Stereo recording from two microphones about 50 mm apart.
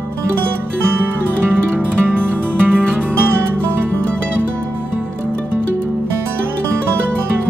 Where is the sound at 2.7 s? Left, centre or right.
Centre.